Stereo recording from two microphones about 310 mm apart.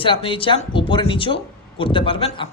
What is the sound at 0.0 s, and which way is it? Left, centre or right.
Speech, centre.